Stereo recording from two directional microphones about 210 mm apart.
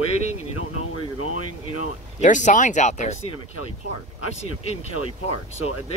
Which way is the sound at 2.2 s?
35° left (ahead or behind).